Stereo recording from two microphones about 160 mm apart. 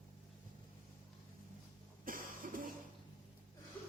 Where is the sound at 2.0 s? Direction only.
60° right (ahead or behind).